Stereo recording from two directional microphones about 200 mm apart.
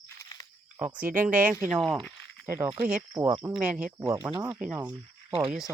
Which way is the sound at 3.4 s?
5° right (ahead or behind).